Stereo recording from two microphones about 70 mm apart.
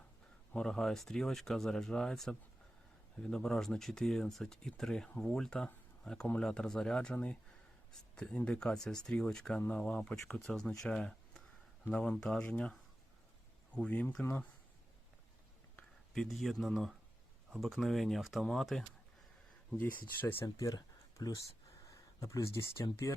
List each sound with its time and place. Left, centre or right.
0.5 s speech: centre
5.6 s a sound: centre
6.4 s speech: centre
13.7 s speech: centre
16.1 s speech: centre
20.2 s speech: left
20.7 s a sound: left
21.8 s speech: left